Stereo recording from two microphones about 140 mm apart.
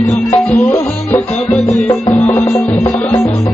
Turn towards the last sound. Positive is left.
turn(degrees=10)  # may be behind; listen again after turning